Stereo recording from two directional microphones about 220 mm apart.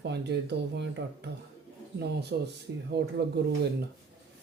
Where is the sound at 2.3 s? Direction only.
50° right (ahead or behind).